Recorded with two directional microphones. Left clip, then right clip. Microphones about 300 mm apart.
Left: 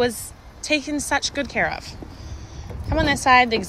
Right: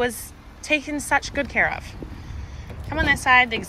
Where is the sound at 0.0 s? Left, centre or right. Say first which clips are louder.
Left 2 dB; centre.